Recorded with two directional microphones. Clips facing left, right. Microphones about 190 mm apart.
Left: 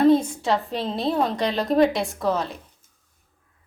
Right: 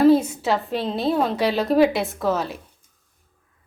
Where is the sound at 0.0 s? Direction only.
5° right (ahead or behind).